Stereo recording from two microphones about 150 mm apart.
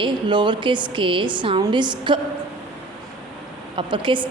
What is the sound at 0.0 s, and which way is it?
A woman's voice, 30° right (ahead or behind).